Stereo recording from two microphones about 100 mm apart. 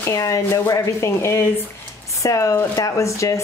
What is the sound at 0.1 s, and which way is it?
Speech, 35° left (ahead or behind).